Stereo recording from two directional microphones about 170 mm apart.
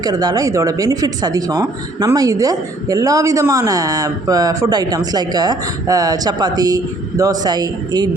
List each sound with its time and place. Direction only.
0.0 s a woman's voice: 25° right (ahead or behind)